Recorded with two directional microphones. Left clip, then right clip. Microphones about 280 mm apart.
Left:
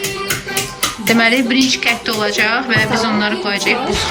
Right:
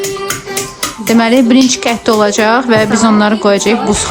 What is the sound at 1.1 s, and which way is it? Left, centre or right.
A woman's voice, centre.